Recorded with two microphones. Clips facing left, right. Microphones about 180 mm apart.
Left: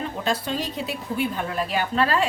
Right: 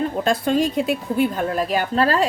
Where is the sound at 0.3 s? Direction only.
50° right (ahead or behind).